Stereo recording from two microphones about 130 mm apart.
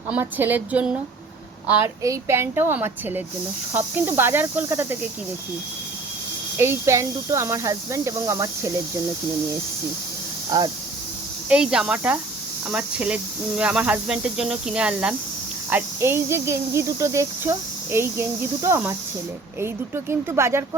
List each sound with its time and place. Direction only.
0.1 s a woman's voice: 15° right (ahead or behind)
6.6 s speech: 20° right (ahead or behind)
10.5 s speech: 25° right (ahead or behind)
11.4 s speech: 5° right (ahead or behind)
15.7 s speech: 20° right (ahead or behind)